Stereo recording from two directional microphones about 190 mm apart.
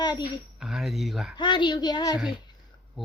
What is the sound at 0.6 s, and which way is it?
Speech, centre (ahead or behind).